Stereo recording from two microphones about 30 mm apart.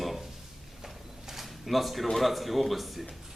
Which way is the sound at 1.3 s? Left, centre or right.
Centre.